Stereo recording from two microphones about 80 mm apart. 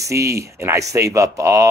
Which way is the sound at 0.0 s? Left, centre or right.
Right.